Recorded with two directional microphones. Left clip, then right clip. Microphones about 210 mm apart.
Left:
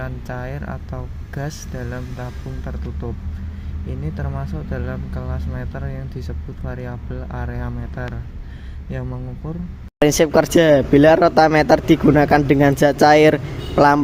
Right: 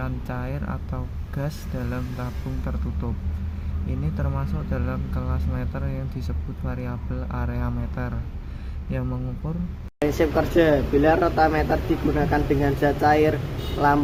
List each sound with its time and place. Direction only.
0.0 s speech: 10° left (ahead or behind)
4.2 s speech: 10° left (ahead or behind)
10.0 s speech: 55° left (ahead or behind)